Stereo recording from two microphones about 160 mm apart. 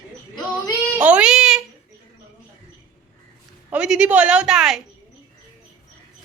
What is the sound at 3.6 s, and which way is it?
Speech, 5° right (ahead or behind).